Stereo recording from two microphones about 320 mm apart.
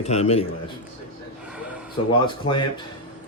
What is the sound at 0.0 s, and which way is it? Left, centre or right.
Speech, centre.